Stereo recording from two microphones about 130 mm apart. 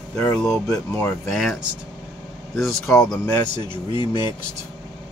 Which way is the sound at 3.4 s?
35° left (ahead or behind).